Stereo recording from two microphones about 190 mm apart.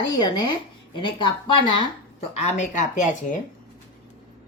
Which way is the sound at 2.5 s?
40° left (ahead or behind).